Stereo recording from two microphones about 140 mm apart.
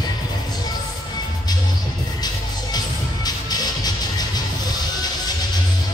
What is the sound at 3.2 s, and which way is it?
Music, 30° left (ahead or behind).